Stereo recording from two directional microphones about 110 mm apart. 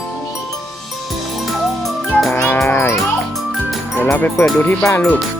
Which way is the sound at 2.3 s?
25° left (ahead or behind).